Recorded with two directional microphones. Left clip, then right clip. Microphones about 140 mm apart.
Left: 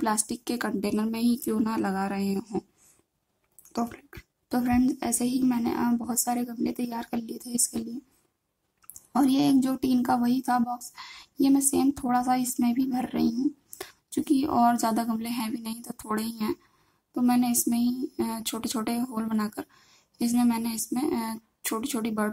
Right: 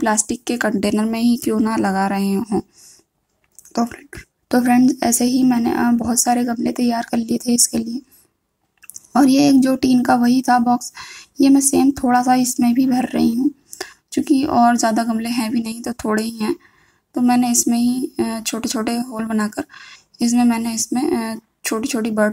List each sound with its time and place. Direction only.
0.0 s speech: 20° right (ahead or behind)
3.7 s a woman's voice: 20° right (ahead or behind)
9.1 s speech: 25° right (ahead or behind)